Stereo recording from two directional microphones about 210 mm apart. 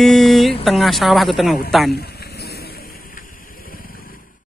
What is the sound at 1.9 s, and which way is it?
Vehicle, 50° left (ahead or behind).